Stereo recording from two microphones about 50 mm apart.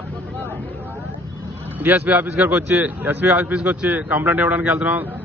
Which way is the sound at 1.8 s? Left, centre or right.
Right.